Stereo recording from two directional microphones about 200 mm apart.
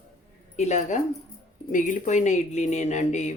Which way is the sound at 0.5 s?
35° left (ahead or behind).